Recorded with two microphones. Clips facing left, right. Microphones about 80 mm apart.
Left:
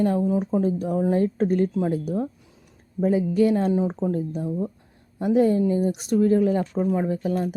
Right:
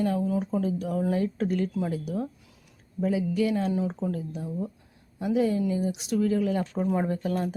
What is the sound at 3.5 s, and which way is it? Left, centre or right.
Speech, left.